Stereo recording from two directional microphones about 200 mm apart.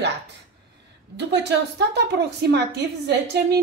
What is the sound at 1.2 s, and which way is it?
A woman's voice, 60° right (ahead or behind).